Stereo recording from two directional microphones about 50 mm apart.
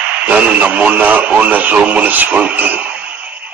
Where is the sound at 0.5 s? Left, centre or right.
Right.